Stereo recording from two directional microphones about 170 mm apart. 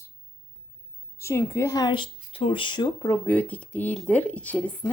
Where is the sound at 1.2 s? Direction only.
15° left (ahead or behind).